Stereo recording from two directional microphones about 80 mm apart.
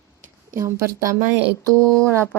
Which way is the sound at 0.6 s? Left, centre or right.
Right.